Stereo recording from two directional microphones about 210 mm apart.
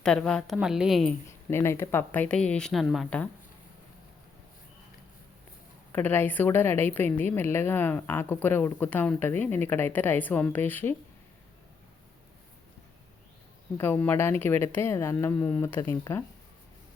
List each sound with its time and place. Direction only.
0.0 s a woman's voice: 5° left (ahead or behind)
1.3 s a woman's voice: 10° left (ahead or behind)
5.9 s a woman's voice: 10° left (ahead or behind)
13.7 s a woman's voice: 10° left (ahead or behind)